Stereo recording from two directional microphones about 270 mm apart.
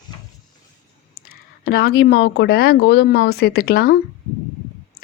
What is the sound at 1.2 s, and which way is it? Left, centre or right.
Speech, left.